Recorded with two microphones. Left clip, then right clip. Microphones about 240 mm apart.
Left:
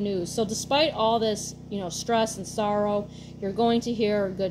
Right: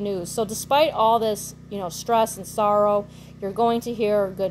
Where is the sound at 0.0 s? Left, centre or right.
Right.